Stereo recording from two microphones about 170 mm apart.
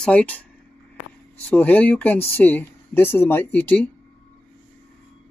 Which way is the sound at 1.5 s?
10° left (ahead or behind).